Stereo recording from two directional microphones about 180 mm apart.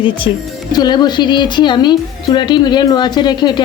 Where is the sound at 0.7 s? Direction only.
25° left (ahead or behind).